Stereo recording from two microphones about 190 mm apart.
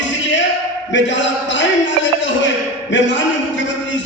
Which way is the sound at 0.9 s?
70° left (ahead or behind).